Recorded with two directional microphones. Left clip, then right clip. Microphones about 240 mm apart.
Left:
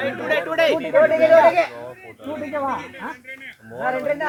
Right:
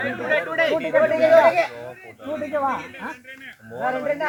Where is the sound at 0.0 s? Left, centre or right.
Left.